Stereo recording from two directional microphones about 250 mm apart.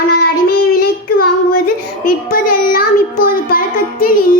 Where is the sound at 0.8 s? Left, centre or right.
Left.